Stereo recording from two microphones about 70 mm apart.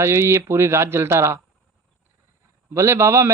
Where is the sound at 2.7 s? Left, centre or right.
Right.